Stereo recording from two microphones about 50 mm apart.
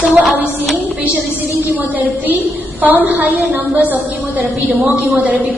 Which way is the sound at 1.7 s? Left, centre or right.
Right.